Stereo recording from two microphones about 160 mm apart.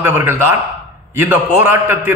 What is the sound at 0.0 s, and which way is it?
A man's voice, 15° right (ahead or behind).